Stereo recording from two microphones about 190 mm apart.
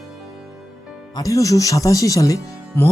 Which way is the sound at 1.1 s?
15° left (ahead or behind).